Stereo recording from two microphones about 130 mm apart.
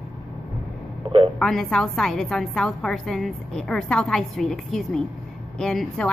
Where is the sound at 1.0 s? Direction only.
40° right (ahead or behind).